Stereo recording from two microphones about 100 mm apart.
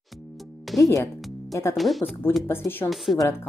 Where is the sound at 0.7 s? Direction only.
30° left (ahead or behind).